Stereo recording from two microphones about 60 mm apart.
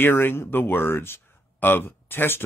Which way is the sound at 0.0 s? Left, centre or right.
Left.